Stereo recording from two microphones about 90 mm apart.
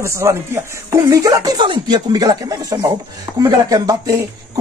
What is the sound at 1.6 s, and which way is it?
Speech, 65° right (ahead or behind).